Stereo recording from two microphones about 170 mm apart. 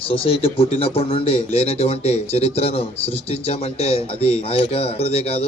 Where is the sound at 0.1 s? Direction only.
35° left (ahead or behind).